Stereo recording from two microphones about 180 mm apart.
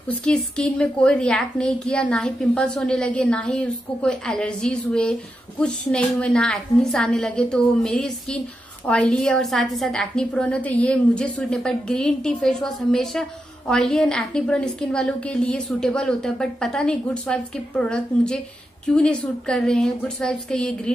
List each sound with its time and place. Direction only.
0.1 s a woman's voice: 5° left (ahead or behind)